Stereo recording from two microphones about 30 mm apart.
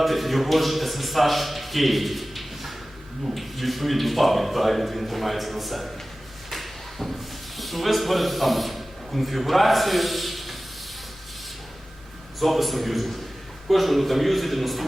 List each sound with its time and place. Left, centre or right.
0.0 s a man's voice: centre
12.4 s speech: centre